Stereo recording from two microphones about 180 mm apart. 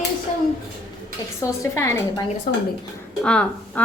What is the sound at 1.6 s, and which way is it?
Speech, 15° left (ahead or behind).